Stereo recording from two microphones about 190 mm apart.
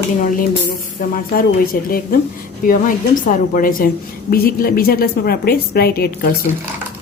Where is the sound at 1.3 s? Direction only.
50° left (ahead or behind).